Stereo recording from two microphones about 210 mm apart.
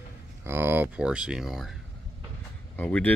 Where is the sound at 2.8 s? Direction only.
5° left (ahead or behind).